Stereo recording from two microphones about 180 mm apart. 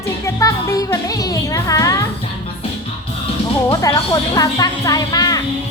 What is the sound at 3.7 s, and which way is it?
Speech, 20° left (ahead or behind).